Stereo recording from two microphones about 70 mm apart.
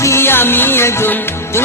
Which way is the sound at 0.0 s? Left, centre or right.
Left.